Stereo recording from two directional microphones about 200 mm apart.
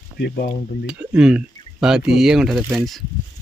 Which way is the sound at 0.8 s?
5° right (ahead or behind).